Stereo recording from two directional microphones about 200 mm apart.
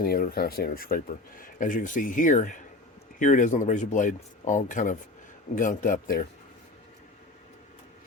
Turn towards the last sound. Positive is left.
turn(degrees=45)  # may be behind; listen again after turning